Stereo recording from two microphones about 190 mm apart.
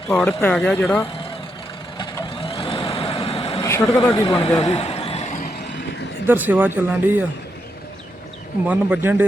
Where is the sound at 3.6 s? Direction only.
15° left (ahead or behind).